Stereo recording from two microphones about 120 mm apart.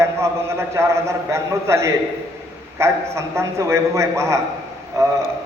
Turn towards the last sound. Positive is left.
turn(degrees=-25)  # may be behind; listen again after turning